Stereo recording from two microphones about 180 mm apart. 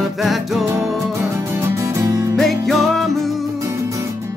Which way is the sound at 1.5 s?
15° right (ahead or behind).